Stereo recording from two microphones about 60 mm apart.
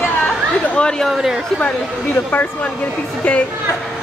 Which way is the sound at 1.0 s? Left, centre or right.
Centre.